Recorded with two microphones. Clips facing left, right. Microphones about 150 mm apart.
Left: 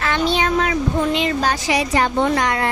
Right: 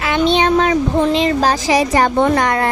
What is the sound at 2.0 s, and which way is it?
Speech, 55° right (ahead or behind).